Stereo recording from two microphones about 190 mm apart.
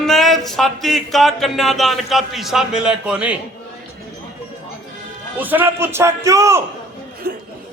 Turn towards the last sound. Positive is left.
turn(degrees=-50)  # may be behind; listen again after turning